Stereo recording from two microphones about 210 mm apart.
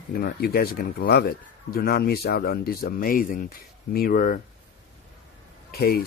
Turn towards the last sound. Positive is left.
turn(degrees=45)  # may be behind; listen again after turning